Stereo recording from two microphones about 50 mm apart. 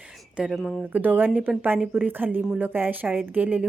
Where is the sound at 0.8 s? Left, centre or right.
Right.